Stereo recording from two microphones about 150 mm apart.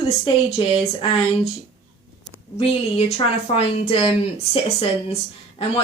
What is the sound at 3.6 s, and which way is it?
A woman's voice, 40° left (ahead or behind).